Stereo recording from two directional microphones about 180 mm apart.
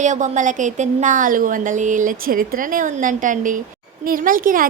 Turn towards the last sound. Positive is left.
turn(degrees=-50)  # may be behind; listen again after turning